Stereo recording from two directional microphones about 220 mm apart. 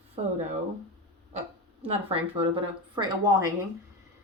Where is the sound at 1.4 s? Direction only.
25° right (ahead or behind).